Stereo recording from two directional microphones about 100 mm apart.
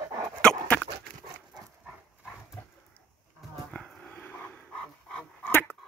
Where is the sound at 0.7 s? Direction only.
15° left (ahead or behind).